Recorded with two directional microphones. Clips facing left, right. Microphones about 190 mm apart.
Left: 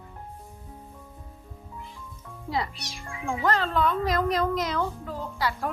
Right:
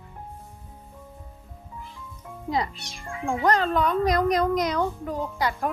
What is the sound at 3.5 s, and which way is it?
A child's voice, 20° right (ahead or behind).